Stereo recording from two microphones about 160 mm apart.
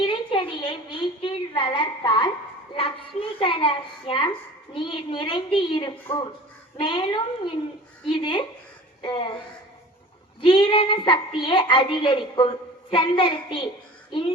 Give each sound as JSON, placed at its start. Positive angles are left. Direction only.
{"t": 0.1, "sound": "a sound", "side_deg": 30}
{"t": 2.7, "sound": "a child's voice", "side_deg": 35}
{"t": 10.4, "sound": "a child's voice", "side_deg": 30}